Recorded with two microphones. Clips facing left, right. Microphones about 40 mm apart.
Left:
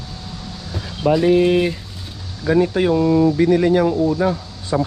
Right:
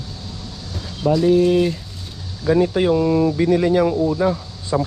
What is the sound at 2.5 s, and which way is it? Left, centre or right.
Speech, centre.